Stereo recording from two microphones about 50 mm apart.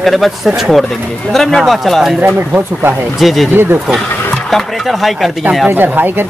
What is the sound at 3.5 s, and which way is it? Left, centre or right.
Speech, right.